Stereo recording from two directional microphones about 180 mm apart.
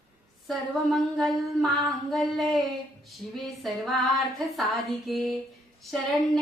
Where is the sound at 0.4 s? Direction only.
Centre (ahead or behind).